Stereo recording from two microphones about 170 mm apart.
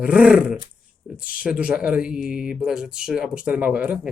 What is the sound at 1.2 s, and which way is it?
Speech, 55° left (ahead or behind).